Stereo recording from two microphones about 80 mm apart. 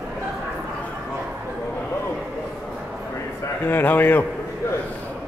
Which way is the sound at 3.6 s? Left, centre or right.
Left.